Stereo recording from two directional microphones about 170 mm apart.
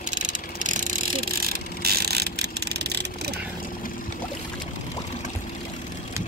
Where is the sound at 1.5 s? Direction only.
65° right (ahead or behind).